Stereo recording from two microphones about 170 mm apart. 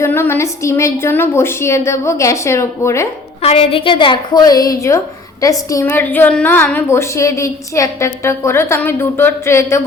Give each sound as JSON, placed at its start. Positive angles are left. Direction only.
{"t": 0.0, "sound": "a woman's voice", "side_deg": 15}
{"t": 3.4, "sound": "a woman's voice", "side_deg": 35}